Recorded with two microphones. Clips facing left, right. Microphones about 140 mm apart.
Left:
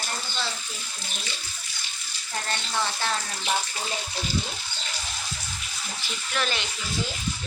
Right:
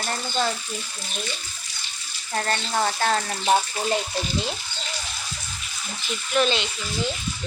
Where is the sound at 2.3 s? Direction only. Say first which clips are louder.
Right 5 dB; 55° right (ahead or behind).